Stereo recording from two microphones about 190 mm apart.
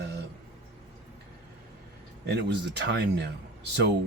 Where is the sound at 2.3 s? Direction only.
65° right (ahead or behind).